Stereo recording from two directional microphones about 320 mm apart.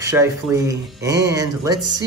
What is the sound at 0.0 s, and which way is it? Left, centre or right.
A man's voice, centre.